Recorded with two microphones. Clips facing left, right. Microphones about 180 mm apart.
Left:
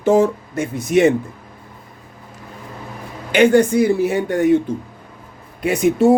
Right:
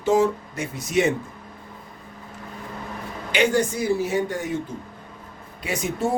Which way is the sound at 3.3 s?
55° left (ahead or behind).